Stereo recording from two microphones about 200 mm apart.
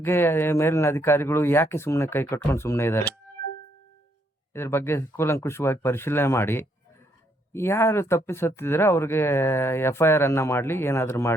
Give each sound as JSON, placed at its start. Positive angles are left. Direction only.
{"t": 0.0, "sound": "speech", "side_deg": 10}
{"t": 4.5, "sound": "speech", "side_deg": 10}